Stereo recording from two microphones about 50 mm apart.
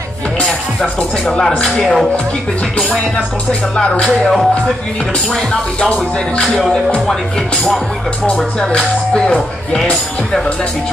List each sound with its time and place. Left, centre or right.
1.2 s speech: centre
3.7 s speech: left
4.1 s speech: centre
5.3 s speech: centre
8.5 s speech: centre